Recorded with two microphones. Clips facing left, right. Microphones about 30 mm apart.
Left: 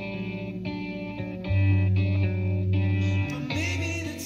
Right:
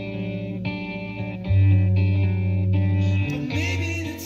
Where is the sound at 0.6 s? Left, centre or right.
Right.